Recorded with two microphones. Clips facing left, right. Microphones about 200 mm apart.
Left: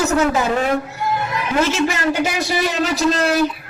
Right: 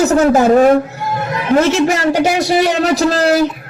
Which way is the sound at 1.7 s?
70° right (ahead or behind).